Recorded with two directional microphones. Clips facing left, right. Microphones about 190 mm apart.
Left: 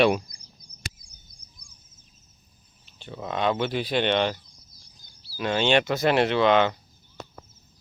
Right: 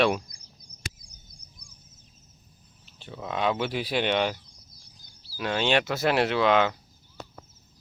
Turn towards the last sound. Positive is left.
turn(degrees=-5)  # may be behind; listen again after turning